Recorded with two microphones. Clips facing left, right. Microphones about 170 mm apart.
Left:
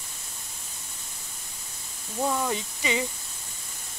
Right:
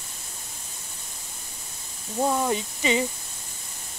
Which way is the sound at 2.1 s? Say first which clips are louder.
Right 3 dB; 20° right (ahead or behind).